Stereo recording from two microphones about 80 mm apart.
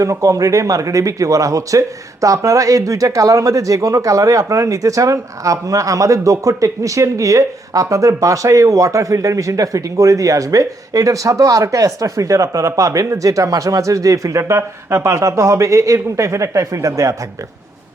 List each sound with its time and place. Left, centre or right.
0.0 s speech: right